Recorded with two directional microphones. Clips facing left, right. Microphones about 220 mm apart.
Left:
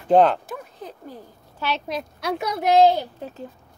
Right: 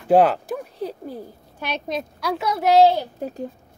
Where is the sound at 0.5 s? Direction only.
35° right (ahead or behind).